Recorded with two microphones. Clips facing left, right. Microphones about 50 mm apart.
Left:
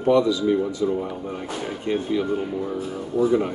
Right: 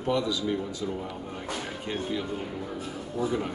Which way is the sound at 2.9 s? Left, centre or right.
Centre.